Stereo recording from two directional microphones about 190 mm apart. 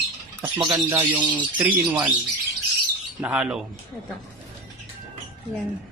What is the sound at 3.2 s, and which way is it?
Speech, 5° right (ahead or behind).